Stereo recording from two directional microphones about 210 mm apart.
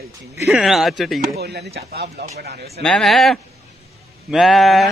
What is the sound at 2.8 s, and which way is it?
Speech, centre (ahead or behind).